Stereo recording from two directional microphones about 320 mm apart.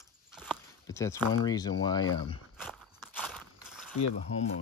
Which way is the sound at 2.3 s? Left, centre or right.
Centre.